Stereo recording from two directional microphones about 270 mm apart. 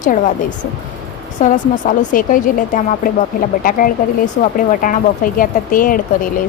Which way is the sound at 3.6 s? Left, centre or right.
Left.